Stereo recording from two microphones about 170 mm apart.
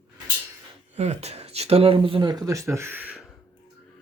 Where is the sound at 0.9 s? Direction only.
40° right (ahead or behind); by 3.2 s 10° right (ahead or behind).